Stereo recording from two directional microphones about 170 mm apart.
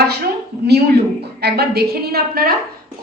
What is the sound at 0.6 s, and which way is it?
A woman's voice, 75° right (ahead or behind).